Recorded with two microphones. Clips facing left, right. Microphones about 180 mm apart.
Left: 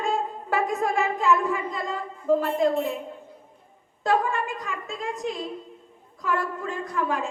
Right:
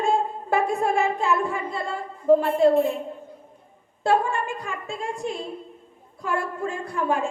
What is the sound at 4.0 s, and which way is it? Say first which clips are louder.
A woman's voice: right 2 dB; 30° right (ahead or behind).